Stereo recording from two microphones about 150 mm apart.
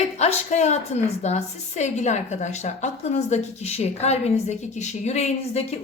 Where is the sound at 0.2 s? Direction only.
50° left (ahead or behind).